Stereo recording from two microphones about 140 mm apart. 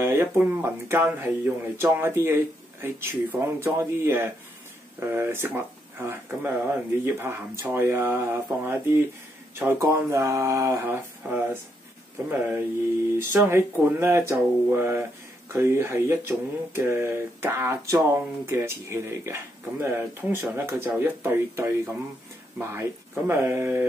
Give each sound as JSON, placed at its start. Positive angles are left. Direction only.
{"t": 0.0, "sound": "speech", "side_deg": -20}